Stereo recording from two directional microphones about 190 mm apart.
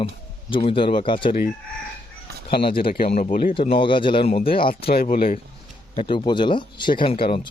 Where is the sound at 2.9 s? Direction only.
40° left (ahead or behind).